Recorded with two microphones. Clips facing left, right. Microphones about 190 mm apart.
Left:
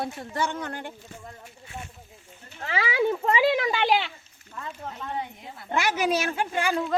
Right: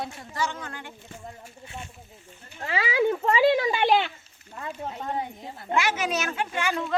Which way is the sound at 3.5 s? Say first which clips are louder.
Right 4 dB; 30° right (ahead or behind).